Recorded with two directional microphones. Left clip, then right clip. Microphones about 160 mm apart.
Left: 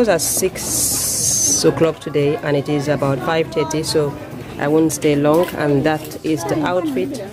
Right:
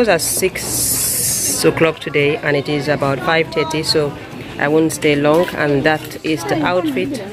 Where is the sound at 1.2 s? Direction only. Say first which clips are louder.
Left 8 dB; 55° left (ahead or behind).